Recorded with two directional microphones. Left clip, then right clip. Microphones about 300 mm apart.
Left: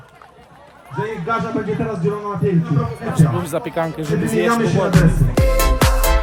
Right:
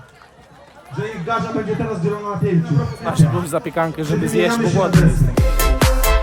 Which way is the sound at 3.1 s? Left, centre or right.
Centre.